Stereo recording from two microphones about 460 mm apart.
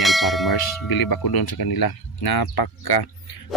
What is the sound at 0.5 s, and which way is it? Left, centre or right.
Speech, left.